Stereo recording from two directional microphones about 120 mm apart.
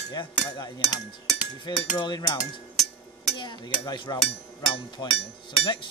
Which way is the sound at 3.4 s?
40° left (ahead or behind).